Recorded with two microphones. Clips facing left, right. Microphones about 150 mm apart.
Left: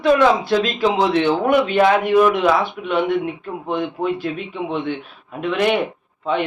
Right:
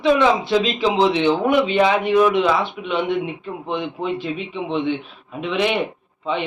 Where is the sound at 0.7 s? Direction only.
15° right (ahead or behind).